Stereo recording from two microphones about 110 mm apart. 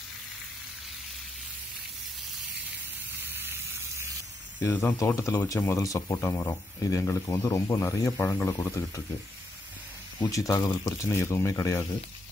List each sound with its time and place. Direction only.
3.2 s gush: 20° right (ahead or behind)
4.6 s speech: 20° left (ahead or behind)
10.2 s speech: 35° left (ahead or behind)